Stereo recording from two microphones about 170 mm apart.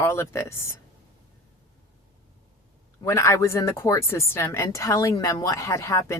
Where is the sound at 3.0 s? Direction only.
15° left (ahead or behind).